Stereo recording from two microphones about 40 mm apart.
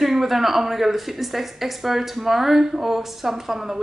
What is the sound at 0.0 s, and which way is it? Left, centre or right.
A woman's voice, centre.